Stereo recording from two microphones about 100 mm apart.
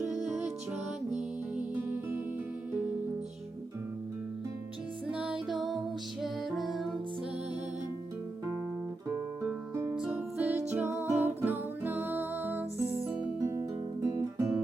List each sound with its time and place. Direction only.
1.5 s music: 20° right (ahead or behind)
5.0 s music: 10° right (ahead or behind)
5.5 s music: centre (ahead or behind)
9.9 s music: 10° right (ahead or behind)
10.3 s music: 20° right (ahead or behind)
13.4 s guitar: 35° right (ahead or behind)